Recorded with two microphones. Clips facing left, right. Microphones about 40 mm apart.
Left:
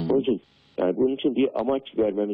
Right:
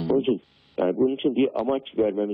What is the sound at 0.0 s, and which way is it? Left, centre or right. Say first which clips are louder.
A man's voice: even; centre.